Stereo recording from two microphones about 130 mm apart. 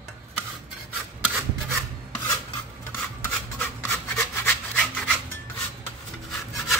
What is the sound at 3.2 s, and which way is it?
Rub, 15° left (ahead or behind).